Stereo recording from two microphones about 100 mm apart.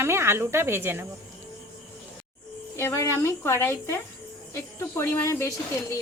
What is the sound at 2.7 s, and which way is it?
Speech, 25° left (ahead or behind).